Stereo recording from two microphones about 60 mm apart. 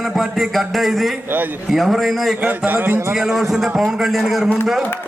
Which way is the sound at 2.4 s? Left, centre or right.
Right.